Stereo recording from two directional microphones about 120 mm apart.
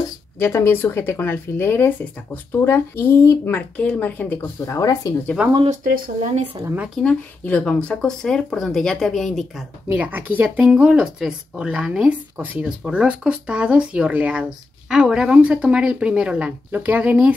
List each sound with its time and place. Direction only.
0.4 s speech: 20° left (ahead or behind)
4.7 s speech: 30° left (ahead or behind)
5.4 s speech: 10° right (ahead or behind)
6.6 s speech: 15° right (ahead or behind)
7.0 s speech: 10° left (ahead or behind)
9.8 s speech: 10° right (ahead or behind)